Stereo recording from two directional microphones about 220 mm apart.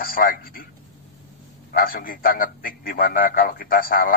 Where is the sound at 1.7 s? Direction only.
40° left (ahead or behind).